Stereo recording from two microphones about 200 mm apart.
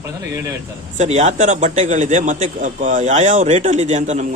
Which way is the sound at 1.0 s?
35° right (ahead or behind).